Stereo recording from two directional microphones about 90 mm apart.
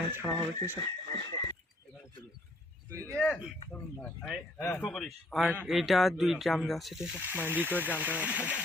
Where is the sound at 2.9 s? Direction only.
35° right (ahead or behind).